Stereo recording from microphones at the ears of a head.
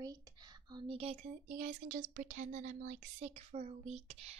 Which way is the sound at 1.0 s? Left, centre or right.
Right.